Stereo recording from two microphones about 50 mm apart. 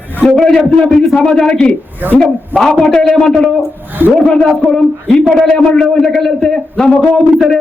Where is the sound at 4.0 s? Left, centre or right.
Right.